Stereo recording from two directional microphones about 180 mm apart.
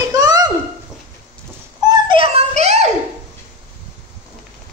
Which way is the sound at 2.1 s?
35° right (ahead or behind).